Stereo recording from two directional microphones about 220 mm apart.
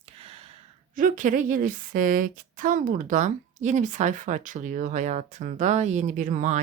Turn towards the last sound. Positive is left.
turn(degrees=-35)  # may be behind; listen again after turning